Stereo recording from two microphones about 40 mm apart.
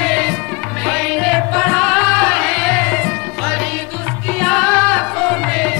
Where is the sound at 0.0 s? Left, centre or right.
Centre.